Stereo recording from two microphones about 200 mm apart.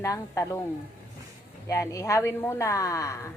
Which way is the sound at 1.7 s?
15° left (ahead or behind).